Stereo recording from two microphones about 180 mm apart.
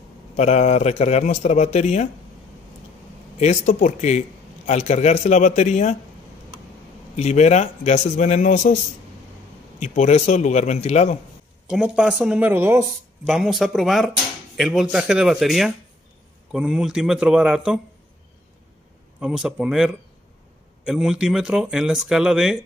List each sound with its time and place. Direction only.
0.4 s speech: 40° left (ahead or behind)
3.3 s speech: 40° left (ahead or behind)
7.2 s speech: 40° left (ahead or behind)
9.8 s speech: 40° left (ahead or behind)
11.6 s speech: 5° right (ahead or behind)
19.1 s speech: 5° right (ahead or behind)